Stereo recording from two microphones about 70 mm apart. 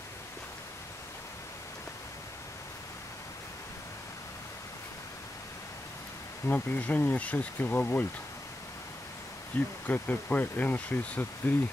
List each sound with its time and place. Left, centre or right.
6.4 s speech: left
9.5 s speech: left